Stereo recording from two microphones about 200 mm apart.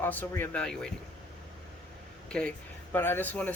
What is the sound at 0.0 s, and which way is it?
Speech, 10° left (ahead or behind).